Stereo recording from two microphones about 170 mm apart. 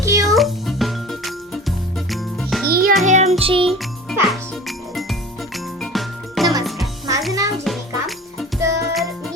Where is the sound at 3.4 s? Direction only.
30° right (ahead or behind).